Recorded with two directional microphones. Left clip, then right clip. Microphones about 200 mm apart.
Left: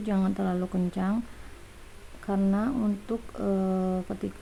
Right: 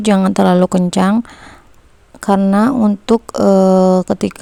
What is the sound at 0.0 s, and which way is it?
Speech, 55° right (ahead or behind).